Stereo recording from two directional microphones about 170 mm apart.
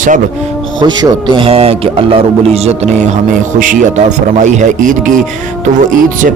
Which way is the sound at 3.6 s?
50° right (ahead or behind).